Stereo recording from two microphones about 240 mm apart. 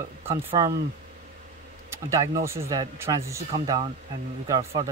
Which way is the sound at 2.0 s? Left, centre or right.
Centre.